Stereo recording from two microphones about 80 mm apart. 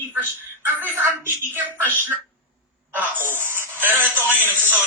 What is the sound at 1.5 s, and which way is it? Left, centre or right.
A woman's voice, right.